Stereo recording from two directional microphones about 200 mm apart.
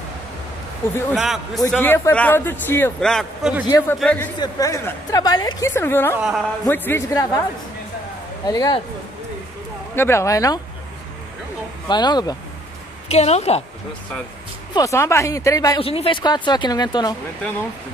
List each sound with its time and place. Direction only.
1.1 s a man's voice: centre (ahead or behind)
1.7 s a man's voice: 10° left (ahead or behind)
3.6 s speech: 20° left (ahead or behind)
4.0 s a man's voice: 5° left (ahead or behind)
4.4 s a man's voice: 15° left (ahead or behind)
6.1 s a man's voice: 5° right (ahead or behind)
6.6 s a man's voice: 10° left (ahead or behind)
8.5 s speech: 20° left (ahead or behind)
9.9 s a man's voice: 15° left (ahead or behind)
11.9 s speech: 20° left (ahead or behind)
13.1 s a woman's voice: 35° left (ahead or behind)
14.7 s a man's voice: 15° left (ahead or behind)
15.8 s speech: 30° left (ahead or behind)